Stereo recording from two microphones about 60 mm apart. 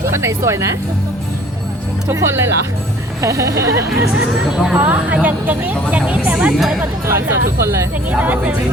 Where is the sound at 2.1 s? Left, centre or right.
Right.